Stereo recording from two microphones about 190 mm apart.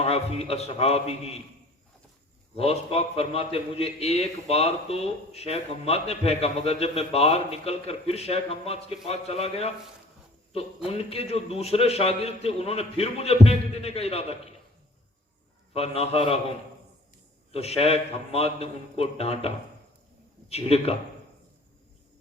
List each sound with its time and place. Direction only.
0.0 s a man's voice: 30° left (ahead or behind)
2.6 s a man's voice: 30° left (ahead or behind)
15.7 s a man's voice: 30° left (ahead or behind)
17.5 s a man's voice: 30° left (ahead or behind)